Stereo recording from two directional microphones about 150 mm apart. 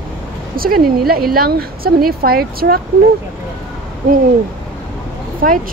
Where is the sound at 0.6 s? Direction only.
80° right.